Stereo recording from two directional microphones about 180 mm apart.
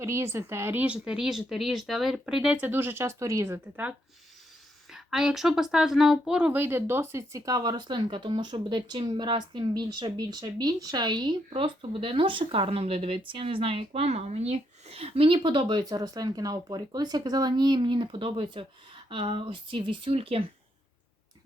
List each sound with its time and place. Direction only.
0.0 s a woman's voice: 15° right (ahead or behind); by 20.4 s 30° right (ahead or behind)